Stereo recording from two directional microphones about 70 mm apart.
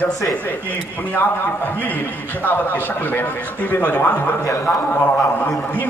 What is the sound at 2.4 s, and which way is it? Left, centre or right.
A man's voice, left.